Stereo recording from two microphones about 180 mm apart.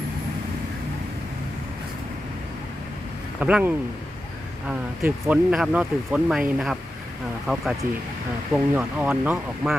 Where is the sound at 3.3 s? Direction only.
5° right (ahead or behind).